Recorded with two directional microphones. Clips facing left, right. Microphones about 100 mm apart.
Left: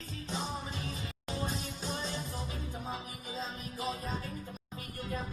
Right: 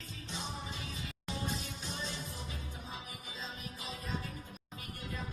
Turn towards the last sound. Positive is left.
turn(degrees=35)  # may be behind; listen again after turning